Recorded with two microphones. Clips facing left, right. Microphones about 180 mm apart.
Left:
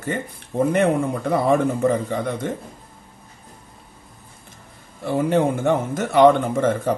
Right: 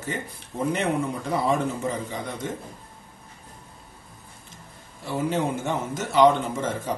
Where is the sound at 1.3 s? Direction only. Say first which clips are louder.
Left 6 dB; 55° left (ahead or behind).